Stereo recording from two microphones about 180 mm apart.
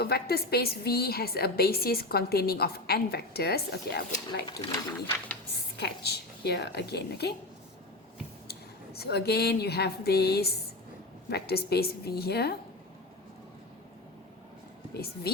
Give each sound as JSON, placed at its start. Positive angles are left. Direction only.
{"t": 0.0, "sound": "a woman's voice", "side_deg": 60}
{"t": 4.7, "sound": "speech", "side_deg": 20}
{"t": 5.7, "sound": "a woman's voice", "side_deg": 65}
{"t": 9.0, "sound": "a woman's voice", "side_deg": 65}
{"t": 14.9, "sound": "a woman's voice", "side_deg": 60}